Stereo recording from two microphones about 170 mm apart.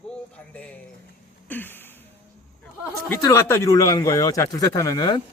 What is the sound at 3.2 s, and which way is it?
Speech, 15° left (ahead or behind).